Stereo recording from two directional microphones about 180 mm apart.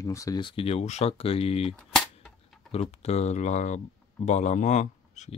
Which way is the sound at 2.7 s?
35° left (ahead or behind).